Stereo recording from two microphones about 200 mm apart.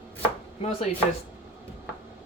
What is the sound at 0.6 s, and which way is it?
Speech, 30° left (ahead or behind).